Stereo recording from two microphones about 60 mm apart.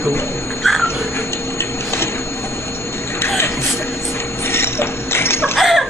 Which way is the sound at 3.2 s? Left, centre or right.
Left.